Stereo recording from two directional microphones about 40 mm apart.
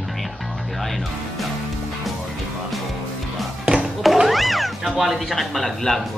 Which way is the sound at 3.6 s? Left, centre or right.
Right.